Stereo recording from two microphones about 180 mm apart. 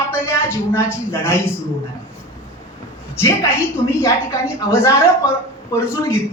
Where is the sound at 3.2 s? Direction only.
15° left (ahead or behind).